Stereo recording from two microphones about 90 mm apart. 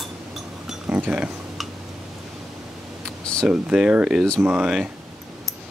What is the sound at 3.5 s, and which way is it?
Speech, 10° right (ahead or behind).